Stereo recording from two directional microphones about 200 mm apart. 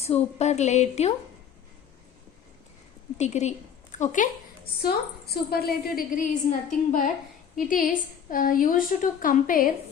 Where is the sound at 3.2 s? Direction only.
35° left (ahead or behind).